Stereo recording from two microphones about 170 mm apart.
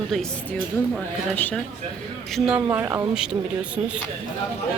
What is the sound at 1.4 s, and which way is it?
Speech, 10° left (ahead or behind).